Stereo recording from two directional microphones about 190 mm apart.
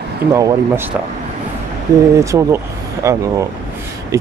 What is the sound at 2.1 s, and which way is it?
Speech, 15° right (ahead or behind).